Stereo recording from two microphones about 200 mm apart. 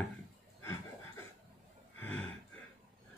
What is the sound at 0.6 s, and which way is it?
Chuckle, 15° left (ahead or behind).